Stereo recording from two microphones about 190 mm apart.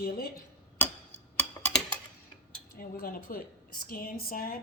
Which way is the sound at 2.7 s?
50° left (ahead or behind).